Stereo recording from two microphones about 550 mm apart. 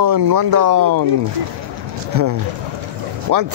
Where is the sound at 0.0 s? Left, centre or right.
Right.